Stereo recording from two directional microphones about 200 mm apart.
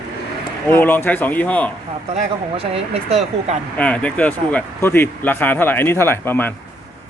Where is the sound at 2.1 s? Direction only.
30° right (ahead or behind).